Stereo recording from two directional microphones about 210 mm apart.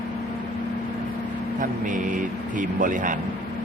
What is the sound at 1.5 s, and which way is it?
Speech, 40° right (ahead or behind).